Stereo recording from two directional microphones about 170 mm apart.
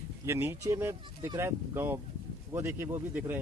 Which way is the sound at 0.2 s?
15° right (ahead or behind).